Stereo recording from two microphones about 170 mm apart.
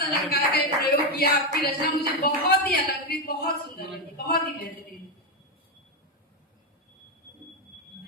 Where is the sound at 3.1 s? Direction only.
60° left (ahead or behind).